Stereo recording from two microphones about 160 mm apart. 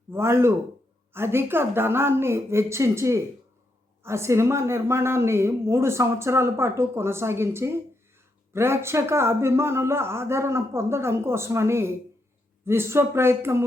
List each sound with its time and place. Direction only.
0.1 s a woman's voice: 15° right (ahead or behind)